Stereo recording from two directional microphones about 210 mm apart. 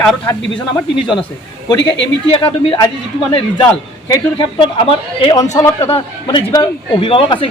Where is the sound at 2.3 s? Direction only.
20° left (ahead or behind).